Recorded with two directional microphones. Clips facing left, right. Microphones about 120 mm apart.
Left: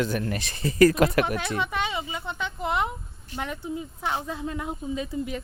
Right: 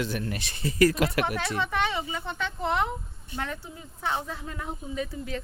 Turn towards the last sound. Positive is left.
turn(degrees=15)  # may be behind; listen again after turning